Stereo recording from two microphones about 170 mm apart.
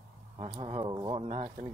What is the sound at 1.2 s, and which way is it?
Speech, 40° right (ahead or behind).